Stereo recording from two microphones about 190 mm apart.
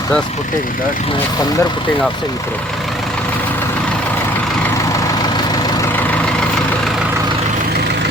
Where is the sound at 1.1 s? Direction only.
20° left (ahead or behind).